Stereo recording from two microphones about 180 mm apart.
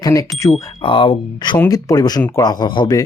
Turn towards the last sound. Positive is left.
turn(degrees=25)  # may be behind; listen again after turning